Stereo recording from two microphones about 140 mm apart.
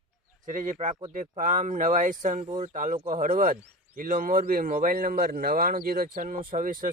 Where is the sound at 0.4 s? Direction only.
70° right (ahead or behind).